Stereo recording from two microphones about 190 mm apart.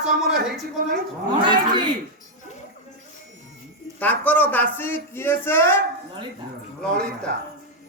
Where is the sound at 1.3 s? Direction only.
25° right (ahead or behind).